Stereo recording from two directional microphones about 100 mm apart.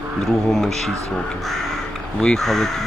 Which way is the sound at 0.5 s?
Centre (ahead or behind).